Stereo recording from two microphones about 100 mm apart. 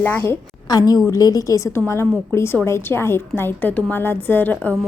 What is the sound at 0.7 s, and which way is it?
A woman's voice, 40° left (ahead or behind).